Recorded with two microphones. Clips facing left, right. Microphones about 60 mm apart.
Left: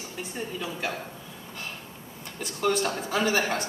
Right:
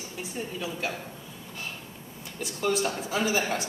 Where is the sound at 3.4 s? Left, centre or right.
Centre.